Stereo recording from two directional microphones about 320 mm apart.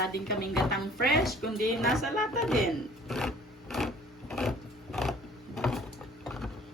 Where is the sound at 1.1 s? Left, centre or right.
Centre.